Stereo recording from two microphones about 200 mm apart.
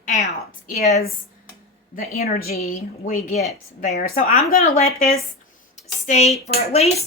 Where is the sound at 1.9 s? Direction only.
45° left (ahead or behind).